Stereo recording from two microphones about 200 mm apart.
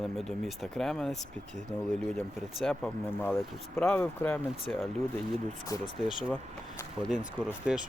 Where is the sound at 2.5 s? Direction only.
5° left (ahead or behind).